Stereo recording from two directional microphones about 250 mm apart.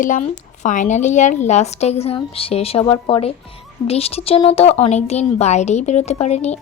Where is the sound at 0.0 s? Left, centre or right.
Left.